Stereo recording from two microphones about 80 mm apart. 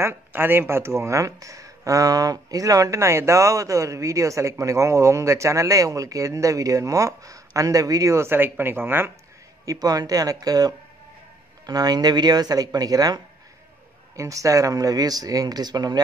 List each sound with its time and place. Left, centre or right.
0.0 s speech: right
9.7 s speech: right
14.1 s speech: right